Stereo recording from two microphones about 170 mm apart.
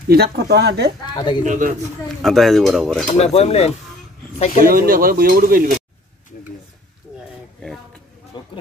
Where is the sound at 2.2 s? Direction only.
Centre (ahead or behind).